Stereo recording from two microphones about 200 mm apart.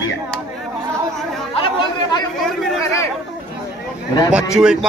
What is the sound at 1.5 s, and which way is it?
Chatter, 25° left (ahead or behind).